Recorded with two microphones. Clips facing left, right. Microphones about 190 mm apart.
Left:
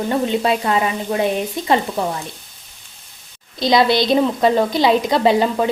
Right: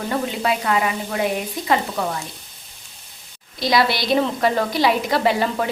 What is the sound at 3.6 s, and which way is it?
A woman's voice, 20° left (ahead or behind).